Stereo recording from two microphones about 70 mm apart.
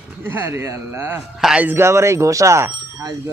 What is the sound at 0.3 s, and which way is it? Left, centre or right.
A man's voice, right.